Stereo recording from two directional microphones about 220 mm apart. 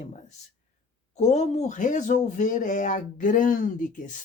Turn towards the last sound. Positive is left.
turn(degrees=35)  # may be behind; listen again after turning